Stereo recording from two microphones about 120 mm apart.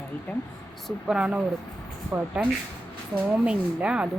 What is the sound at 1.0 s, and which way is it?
A woman's voice, 10° right (ahead or behind).